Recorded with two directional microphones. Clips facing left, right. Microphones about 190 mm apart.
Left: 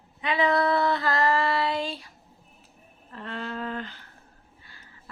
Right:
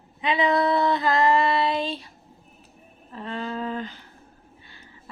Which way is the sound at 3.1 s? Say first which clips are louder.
Right 3 dB; 15° right (ahead or behind).